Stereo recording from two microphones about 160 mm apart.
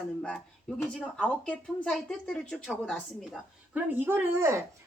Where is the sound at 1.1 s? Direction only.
5° left (ahead or behind).